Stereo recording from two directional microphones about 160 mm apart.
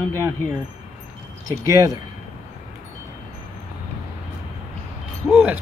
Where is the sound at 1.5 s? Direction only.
20° right (ahead or behind).